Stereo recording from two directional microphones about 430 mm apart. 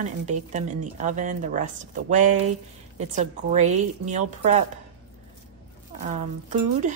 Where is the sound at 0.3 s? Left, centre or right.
Centre.